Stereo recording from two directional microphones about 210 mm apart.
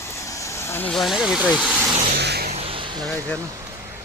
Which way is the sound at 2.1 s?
50° right (ahead or behind).